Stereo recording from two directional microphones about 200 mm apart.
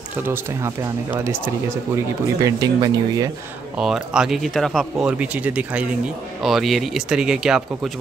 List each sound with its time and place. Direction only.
0.1 s speech: 15° right (ahead or behind)
2.4 s speech: 20° right (ahead or behind)
3.7 s speech: 5° right (ahead or behind)